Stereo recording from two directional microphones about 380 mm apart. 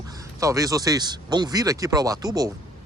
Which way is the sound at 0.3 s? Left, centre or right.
Centre.